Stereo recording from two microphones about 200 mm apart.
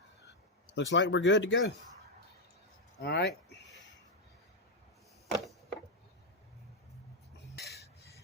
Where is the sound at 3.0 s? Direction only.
55° left (ahead or behind).